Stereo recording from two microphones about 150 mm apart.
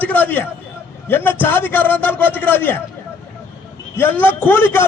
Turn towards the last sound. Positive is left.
turn(degrees=15)  # may be behind; listen again after turning